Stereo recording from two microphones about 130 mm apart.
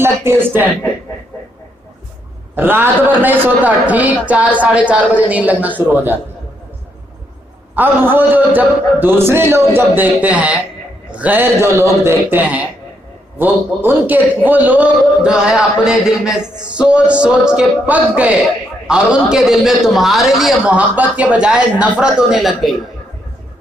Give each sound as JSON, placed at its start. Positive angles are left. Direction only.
{"t": 0.0, "sound": "speech", "side_deg": -15}
{"t": 2.6, "sound": "a man's voice", "side_deg": -15}
{"t": 7.8, "sound": "a man's voice", "side_deg": -15}